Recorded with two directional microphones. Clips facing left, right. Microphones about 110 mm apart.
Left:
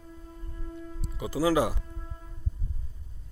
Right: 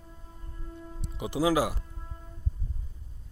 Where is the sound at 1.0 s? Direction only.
25° right (ahead or behind).